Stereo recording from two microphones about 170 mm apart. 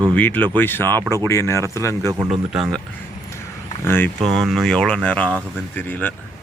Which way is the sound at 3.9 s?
10° left (ahead or behind).